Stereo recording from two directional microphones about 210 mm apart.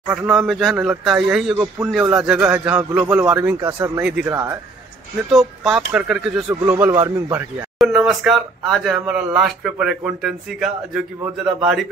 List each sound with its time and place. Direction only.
0.1 s speech: centre (ahead or behind)
7.8 s speech: centre (ahead or behind)